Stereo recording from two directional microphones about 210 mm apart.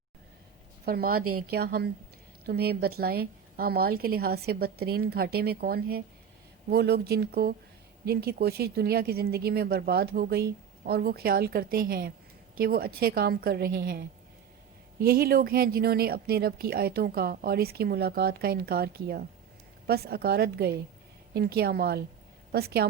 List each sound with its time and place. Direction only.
0.9 s speech: 45° right (ahead or behind)
1.2 s speech: 90° right
1.5 s speech: 50° right (ahead or behind)
15.0 s speech: 45° right (ahead or behind)